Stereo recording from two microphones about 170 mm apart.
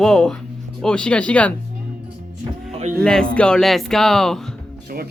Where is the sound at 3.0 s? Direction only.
5° left (ahead or behind).